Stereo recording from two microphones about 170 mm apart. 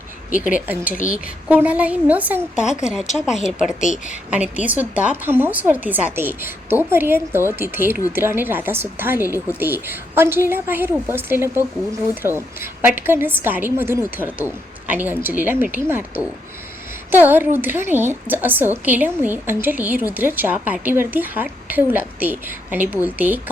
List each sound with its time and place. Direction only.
1.1 s a woman's voice: 10° right (ahead or behind)
3.9 s a woman's voice: 45° left (ahead or behind)
4.3 s a woman's voice: 10° right (ahead or behind)